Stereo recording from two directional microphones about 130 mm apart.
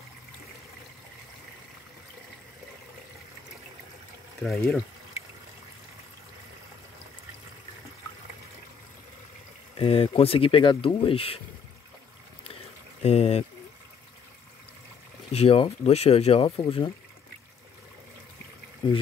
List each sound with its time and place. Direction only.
4.4 s speech: centre (ahead or behind)
9.8 s speech: 45° left (ahead or behind)
13.0 s speech: 55° left (ahead or behind)
15.3 s speech: 45° left (ahead or behind)
18.8 s speech: 40° left (ahead or behind)